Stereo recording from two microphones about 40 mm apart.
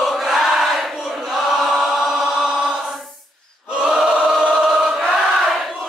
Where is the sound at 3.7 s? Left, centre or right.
Right.